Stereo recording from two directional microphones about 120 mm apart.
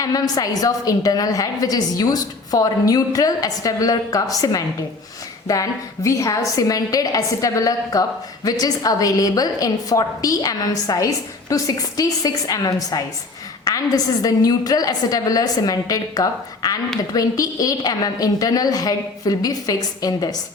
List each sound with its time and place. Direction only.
0.0 s a woman's voice: 30° left (ahead or behind)